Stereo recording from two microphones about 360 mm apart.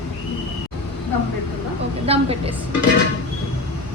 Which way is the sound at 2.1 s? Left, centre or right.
Centre.